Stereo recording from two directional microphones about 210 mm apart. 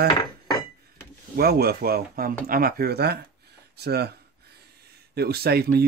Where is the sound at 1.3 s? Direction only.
50° right (ahead or behind).